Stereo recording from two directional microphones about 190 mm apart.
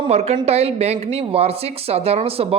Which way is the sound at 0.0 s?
35° right (ahead or behind).